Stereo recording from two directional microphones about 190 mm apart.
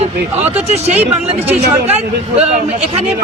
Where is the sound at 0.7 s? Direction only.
35° right (ahead or behind).